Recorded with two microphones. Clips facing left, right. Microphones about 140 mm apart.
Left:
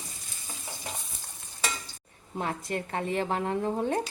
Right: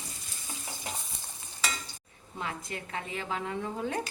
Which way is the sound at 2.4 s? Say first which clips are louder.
Left 5 dB; 45° left (ahead or behind).